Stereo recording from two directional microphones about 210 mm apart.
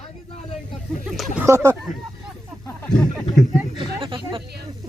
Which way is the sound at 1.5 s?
15° right (ahead or behind).